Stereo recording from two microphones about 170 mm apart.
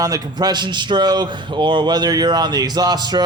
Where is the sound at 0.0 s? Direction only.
20° right (ahead or behind).